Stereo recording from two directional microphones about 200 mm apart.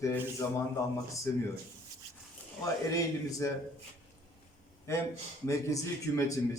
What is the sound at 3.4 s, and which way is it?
Speech, 15° left (ahead or behind).